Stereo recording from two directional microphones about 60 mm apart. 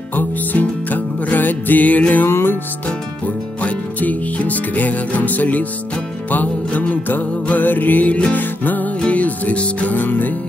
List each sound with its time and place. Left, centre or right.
0.1 s music: left
2.2 s music: left
3.6 s music: left